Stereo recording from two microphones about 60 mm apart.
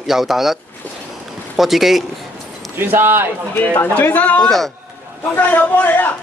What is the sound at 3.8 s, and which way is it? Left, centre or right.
A man's voice, left.